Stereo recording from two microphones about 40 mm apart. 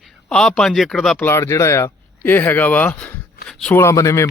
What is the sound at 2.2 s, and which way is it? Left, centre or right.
Speech, left.